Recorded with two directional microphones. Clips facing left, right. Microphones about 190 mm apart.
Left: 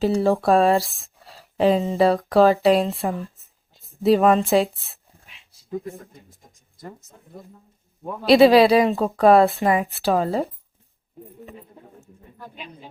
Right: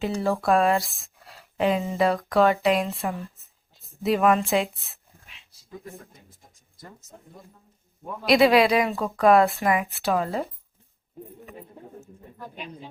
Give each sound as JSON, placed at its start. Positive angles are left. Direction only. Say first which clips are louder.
{"t": 0.0, "sound": "speech", "louder": "left 6 dB", "side_deg": 30}
{"t": 1.0, "sound": "a sound", "louder": "left 3 dB", "side_deg": 30}
{"t": 1.9, "sound": "speech", "louder": "left 5 dB", "side_deg": 30}
{"t": 8.2, "sound": "speech", "louder": "left 5 dB", "side_deg": 30}